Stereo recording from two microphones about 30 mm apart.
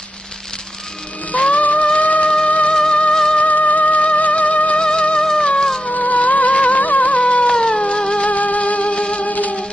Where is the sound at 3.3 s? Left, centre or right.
Left.